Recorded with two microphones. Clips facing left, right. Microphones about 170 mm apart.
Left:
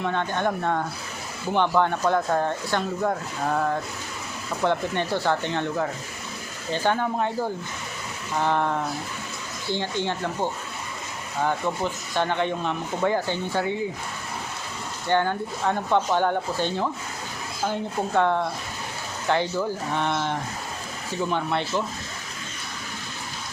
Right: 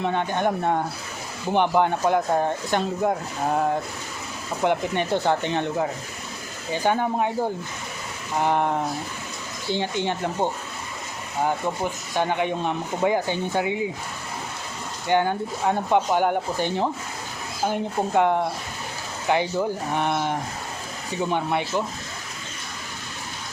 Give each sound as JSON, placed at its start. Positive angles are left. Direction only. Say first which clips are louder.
{"t": 0.0, "sound": "speech", "louder": "right 2 dB", "side_deg": -15}
{"t": 8.4, "sound": "speech", "louder": "right 2 dB", "side_deg": -15}
{"t": 15.0, "sound": "speech", "louder": "right 2 dB", "side_deg": -15}